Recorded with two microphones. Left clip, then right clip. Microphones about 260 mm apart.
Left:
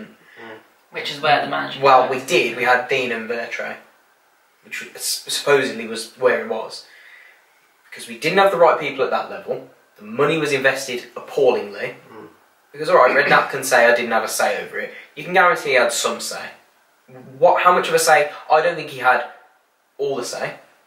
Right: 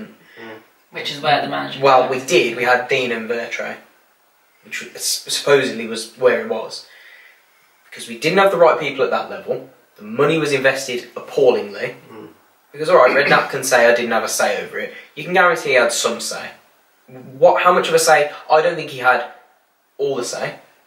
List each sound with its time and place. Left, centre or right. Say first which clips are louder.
0.4 s speech: right 2 dB; centre
7.9 s speech: right 2 dB; centre